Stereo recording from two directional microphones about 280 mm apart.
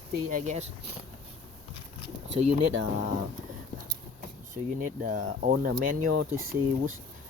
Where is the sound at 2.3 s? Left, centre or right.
Right.